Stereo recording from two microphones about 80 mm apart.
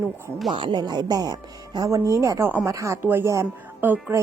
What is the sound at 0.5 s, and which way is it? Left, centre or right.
Speech, right.